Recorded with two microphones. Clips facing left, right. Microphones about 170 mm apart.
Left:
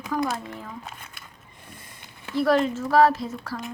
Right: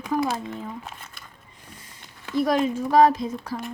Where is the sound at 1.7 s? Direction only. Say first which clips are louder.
Left 1 dB; 55° left (ahead or behind).